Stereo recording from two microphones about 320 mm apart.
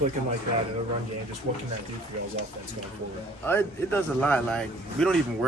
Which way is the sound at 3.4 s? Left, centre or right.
Centre.